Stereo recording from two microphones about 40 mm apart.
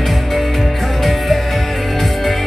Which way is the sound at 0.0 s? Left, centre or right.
Centre.